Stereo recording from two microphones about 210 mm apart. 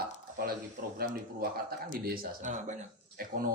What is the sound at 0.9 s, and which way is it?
A man's voice, 45° right (ahead or behind).